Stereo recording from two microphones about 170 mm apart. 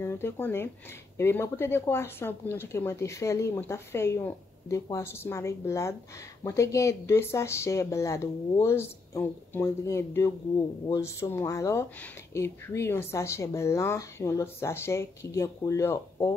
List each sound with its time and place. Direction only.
0.0 s speech: 15° left (ahead or behind)